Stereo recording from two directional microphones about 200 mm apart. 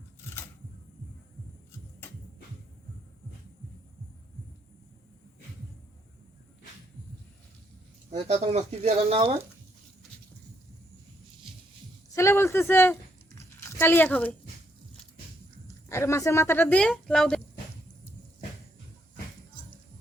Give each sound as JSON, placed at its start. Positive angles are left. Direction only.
{"t": 8.1, "sound": "speech", "side_deg": -30}
{"t": 12.1, "sound": "a sound", "side_deg": 15}
{"t": 15.9, "sound": "speech", "side_deg": 15}